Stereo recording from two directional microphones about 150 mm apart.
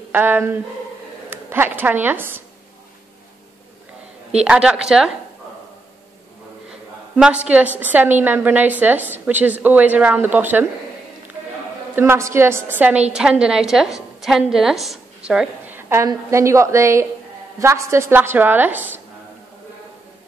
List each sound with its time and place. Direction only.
0.1 s a woman's voice: 10° right (ahead or behind)
4.5 s a woman's voice: 5° right (ahead or behind)
7.2 s a woman's voice: 5° right (ahead or behind)
11.9 s a woman's voice: 15° right (ahead or behind)